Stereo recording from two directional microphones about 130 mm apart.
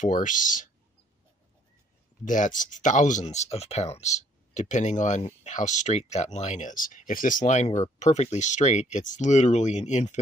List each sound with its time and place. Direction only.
0.0 s speech: 80° left
2.2 s speech: 80° left